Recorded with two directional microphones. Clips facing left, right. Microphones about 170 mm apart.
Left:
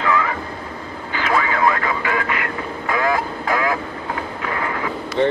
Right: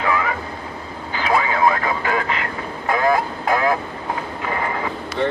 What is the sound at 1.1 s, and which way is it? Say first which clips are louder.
Radio: right 1 dB; 15° right (ahead or behind).